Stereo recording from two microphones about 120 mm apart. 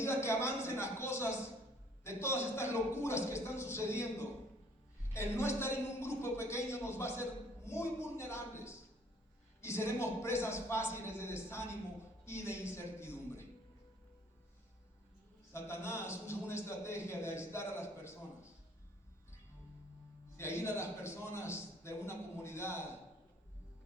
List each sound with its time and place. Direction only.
0.0 s a man's voice: 20° left (ahead or behind)
15.5 s a man's voice: 20° left (ahead or behind)
20.3 s a man's voice: 20° left (ahead or behind)